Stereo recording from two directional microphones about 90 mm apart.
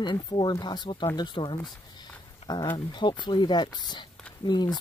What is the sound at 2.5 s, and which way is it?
Speech, 50° left (ahead or behind).